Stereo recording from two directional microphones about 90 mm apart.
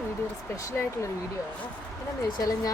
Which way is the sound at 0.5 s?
40° left (ahead or behind).